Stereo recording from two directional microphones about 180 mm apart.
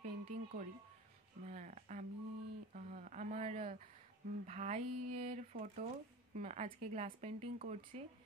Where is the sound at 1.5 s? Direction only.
40° right (ahead or behind).